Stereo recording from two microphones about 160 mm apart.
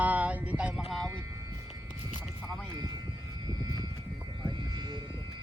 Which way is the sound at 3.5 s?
25° right (ahead or behind).